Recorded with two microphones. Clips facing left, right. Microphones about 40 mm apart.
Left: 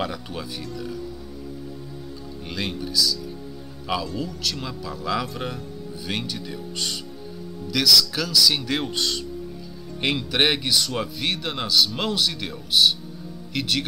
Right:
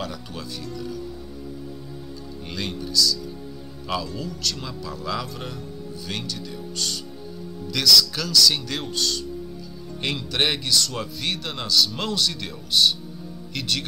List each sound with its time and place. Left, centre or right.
2.5 s speech: centre
7.7 s speech: centre
8.9 s speech: left; by 13.8 s centre